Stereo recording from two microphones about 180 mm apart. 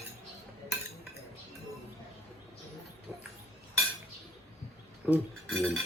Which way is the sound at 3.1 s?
15° right (ahead or behind).